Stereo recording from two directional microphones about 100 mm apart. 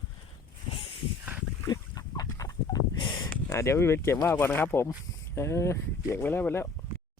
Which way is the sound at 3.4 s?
30° left (ahead or behind).